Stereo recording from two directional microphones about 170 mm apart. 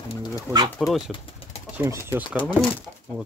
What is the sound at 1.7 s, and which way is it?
Speech, 15° right (ahead or behind).